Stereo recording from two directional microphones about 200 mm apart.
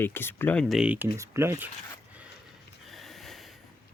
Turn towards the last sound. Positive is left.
turn(degrees=0)  # may be behind; listen again after turning